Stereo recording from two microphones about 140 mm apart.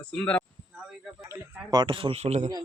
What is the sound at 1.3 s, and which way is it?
A man's voice, 30° right (ahead or behind).